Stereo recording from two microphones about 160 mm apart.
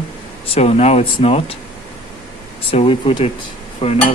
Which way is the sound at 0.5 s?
40° left (ahead or behind).